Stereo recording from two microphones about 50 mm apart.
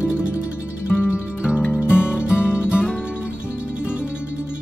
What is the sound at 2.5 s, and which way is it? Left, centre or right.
Music, centre.